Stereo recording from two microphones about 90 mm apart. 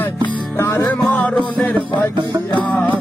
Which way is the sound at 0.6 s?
30° left (ahead or behind).